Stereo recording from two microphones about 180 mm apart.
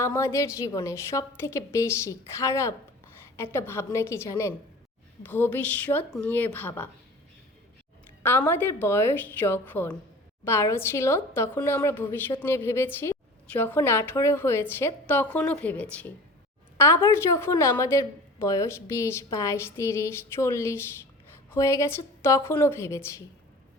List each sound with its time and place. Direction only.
0.0 s a woman's voice: 15° left (ahead or behind)
8.2 s a woman's voice: 10° left (ahead or behind)